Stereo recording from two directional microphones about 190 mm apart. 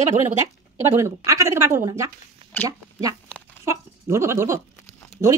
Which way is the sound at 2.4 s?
30° right (ahead or behind).